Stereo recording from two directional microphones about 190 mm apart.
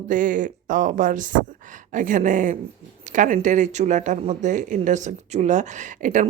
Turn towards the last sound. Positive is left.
turn(degrees=-40)  # may be behind; listen again after turning